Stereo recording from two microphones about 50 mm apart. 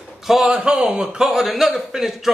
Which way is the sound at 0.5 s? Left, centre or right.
Centre.